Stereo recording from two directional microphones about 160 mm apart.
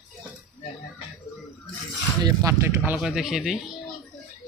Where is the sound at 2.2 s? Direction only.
25° right (ahead or behind).